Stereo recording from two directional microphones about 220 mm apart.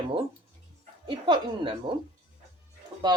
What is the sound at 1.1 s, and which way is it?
Speech, 20° right (ahead or behind).